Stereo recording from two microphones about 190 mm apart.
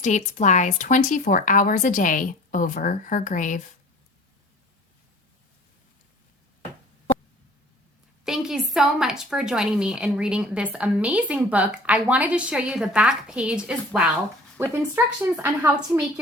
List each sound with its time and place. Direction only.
0.0 s speech: 40° left (ahead or behind)
8.2 s a woman's voice: 5° right (ahead or behind)